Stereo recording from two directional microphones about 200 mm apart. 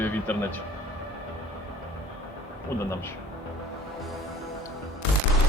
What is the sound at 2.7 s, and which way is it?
Speech, 15° left (ahead or behind).